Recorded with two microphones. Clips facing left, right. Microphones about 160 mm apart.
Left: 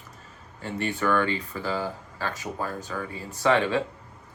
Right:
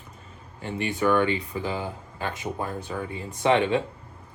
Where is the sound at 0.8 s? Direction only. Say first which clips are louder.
Right 3 dB; 15° right (ahead or behind).